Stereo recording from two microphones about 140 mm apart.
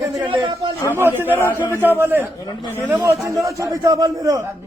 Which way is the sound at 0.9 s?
15° right (ahead or behind).